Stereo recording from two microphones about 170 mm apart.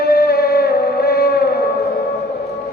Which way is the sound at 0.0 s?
65° left (ahead or behind).